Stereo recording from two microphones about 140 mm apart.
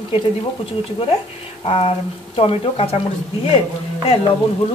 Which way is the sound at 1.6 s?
45° left (ahead or behind).